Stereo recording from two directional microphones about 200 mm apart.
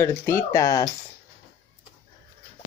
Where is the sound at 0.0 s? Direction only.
15° left (ahead or behind).